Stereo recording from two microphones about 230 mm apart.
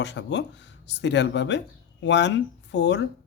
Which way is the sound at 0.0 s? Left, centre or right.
Left.